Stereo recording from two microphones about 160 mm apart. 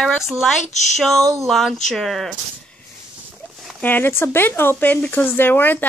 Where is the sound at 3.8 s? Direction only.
10° left (ahead or behind).